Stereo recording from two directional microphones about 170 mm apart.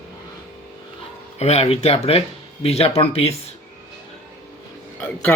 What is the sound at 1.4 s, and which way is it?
Speech, 40° left (ahead or behind).